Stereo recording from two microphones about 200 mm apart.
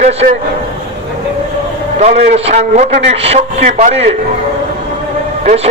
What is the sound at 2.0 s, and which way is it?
A man's voice, 30° right (ahead or behind).